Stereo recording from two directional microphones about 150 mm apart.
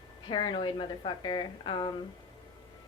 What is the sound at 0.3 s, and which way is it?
Speech, 30° left (ahead or behind).